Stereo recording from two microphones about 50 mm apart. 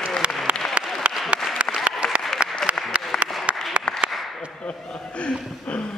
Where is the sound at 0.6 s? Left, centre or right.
Centre.